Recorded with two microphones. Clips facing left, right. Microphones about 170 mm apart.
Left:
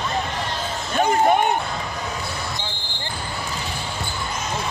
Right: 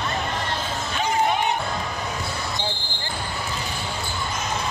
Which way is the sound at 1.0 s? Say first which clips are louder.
Left 5 dB; 50° left (ahead or behind).